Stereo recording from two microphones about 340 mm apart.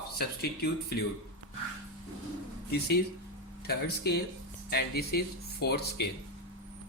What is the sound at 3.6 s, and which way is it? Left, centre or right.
Speech, left.